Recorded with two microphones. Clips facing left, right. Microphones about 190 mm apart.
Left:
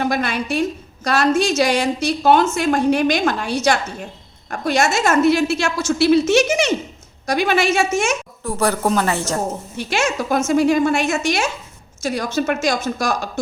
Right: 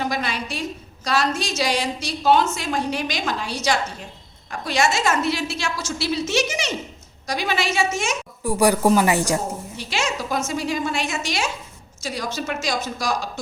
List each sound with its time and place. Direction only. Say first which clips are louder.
0.0 s a woman's voice: left 5 dB; 55° left (ahead or behind)
8.4 s a woman's voice: right 2 dB; 15° right (ahead or behind)
9.7 s a woman's voice: left 6 dB; 50° left (ahead or behind)